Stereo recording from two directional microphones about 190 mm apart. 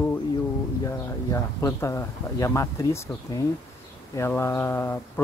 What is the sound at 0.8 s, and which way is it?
Speech, 15° left (ahead or behind).